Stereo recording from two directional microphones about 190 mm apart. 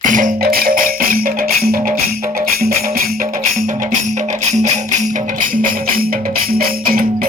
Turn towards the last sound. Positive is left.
turn(degrees=-50)  # may be behind; listen again after turning